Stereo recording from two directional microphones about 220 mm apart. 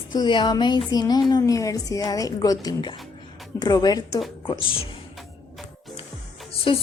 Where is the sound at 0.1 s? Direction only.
20° left (ahead or behind).